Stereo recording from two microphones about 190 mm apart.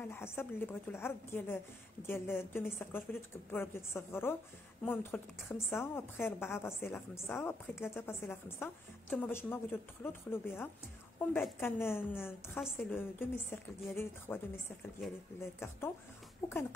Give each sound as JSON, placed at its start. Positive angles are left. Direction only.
{"t": 0.1, "sound": "a woman's voice", "side_deg": 10}
{"t": 15.4, "sound": "a woman's voice", "side_deg": 15}